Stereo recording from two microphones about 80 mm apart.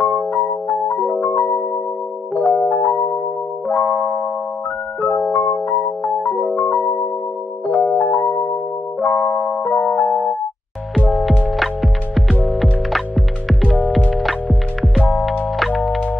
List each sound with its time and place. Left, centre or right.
0.0 s music: left
0.9 s music: centre
5.3 s music: left
7.8 s music: left
9.0 s music: left
11.5 s music: centre